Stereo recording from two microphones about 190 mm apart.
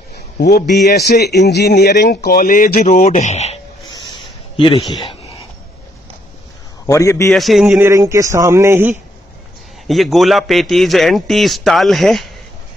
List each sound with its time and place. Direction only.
0.4 s speech: 55° left (ahead or behind); by 3.5 s 35° left (ahead or behind)
4.1 s a sound: 25° left (ahead or behind)
6.9 s a man's voice: 15° left (ahead or behind)
7.3 s speech: centre (ahead or behind)
9.8 s a man's voice: centre (ahead or behind)